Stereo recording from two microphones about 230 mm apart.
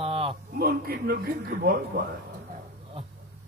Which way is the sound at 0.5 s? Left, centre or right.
Right.